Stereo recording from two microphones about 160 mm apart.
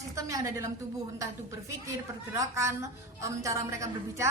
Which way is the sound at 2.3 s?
20° right (ahead or behind).